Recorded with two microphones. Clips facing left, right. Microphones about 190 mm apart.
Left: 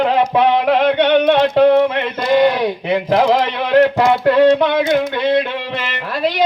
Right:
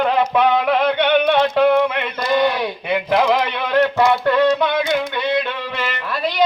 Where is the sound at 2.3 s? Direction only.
35° left (ahead or behind).